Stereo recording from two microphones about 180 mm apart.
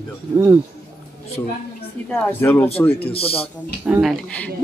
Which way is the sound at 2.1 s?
10° left (ahead or behind).